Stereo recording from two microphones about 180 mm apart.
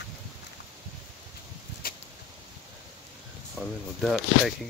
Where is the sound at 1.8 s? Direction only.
55° left (ahead or behind).